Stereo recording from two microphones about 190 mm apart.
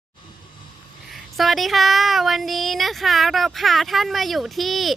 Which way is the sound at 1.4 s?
Centre (ahead or behind).